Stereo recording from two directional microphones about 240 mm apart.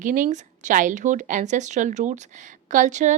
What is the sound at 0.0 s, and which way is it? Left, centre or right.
A woman's voice, right.